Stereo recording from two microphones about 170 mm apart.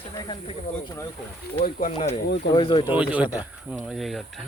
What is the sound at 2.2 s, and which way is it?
Speech, 85° left.